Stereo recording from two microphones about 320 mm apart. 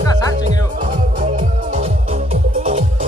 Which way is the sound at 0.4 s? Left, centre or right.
Right.